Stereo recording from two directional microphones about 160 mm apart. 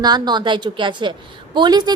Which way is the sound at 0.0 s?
25° right (ahead or behind).